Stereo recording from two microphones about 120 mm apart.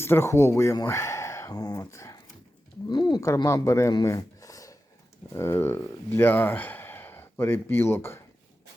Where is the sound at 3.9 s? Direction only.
30° left (ahead or behind).